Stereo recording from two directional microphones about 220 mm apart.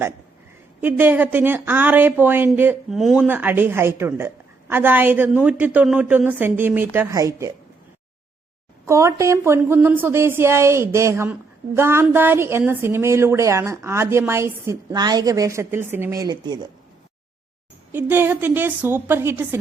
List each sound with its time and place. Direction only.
0.8 s a woman's voice: 10° right (ahead or behind)
8.9 s a woman's voice: 15° right (ahead or behind)
17.9 s a woman's voice: 10° right (ahead or behind)